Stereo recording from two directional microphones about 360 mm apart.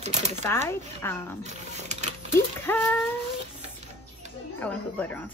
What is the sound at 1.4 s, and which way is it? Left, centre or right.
Speech, centre.